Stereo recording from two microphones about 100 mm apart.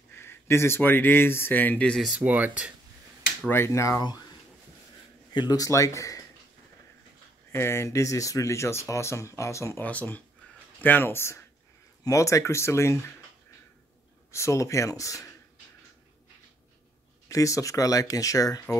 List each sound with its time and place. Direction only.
0.1 s speech: 25° left (ahead or behind)
2.0 s speech: 15° right (ahead or behind)
3.4 s speech: 25° left (ahead or behind)
4.0 s speech: 45° left (ahead or behind)
5.3 s speech: 45° left (ahead or behind)
7.5 s speech: 25° left (ahead or behind)
9.8 s speech: 15° left (ahead or behind)
14.3 s speech: 30° left (ahead or behind)
17.3 s speech: 35° left (ahead or behind)